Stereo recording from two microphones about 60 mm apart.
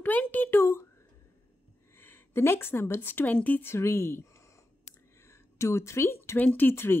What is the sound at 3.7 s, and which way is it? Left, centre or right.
Speech, left.